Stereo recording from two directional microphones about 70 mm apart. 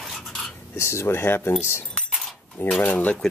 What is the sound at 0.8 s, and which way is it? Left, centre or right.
Speech, left.